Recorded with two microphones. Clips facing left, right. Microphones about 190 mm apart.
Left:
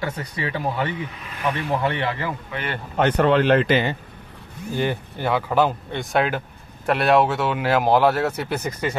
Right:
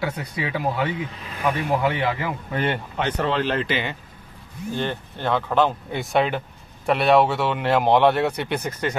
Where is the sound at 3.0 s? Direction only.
55° left (ahead or behind).